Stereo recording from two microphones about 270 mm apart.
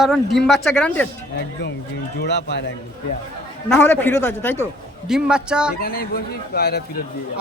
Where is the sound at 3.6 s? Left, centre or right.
Centre.